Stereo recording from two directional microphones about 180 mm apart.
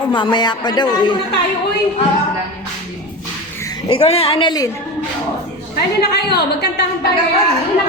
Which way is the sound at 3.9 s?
35° left (ahead or behind).